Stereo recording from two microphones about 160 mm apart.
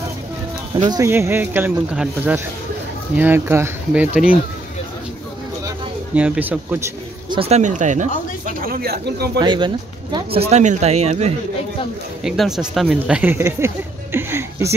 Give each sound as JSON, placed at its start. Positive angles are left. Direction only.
{"t": 0.8, "sound": "speech", "side_deg": -20}
{"t": 6.1, "sound": "speech", "side_deg": -10}
{"t": 7.2, "sound": "speech", "side_deg": -35}
{"t": 8.5, "sound": "speech", "side_deg": -65}
{"t": 9.4, "sound": "speech", "side_deg": -30}
{"t": 12.2, "sound": "speech", "side_deg": 0}
{"t": 14.1, "sound": "a sound", "side_deg": -15}